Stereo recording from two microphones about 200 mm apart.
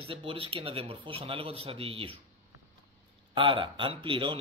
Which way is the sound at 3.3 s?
25° right (ahead or behind).